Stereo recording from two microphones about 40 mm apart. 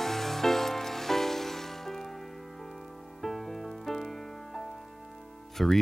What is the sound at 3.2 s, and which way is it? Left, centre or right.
Music, centre.